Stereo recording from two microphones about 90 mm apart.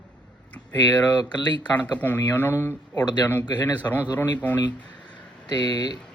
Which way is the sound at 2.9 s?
50° left (ahead or behind).